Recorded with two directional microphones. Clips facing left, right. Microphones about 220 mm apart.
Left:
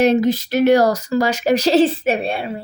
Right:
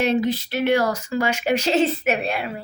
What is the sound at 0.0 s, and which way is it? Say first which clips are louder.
Speech: left 6 dB; 40° left (ahead or behind).